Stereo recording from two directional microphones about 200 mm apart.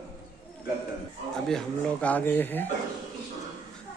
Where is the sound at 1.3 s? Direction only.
5° left (ahead or behind).